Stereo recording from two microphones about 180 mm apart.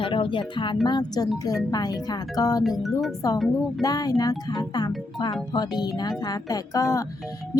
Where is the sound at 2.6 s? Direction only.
Centre (ahead or behind).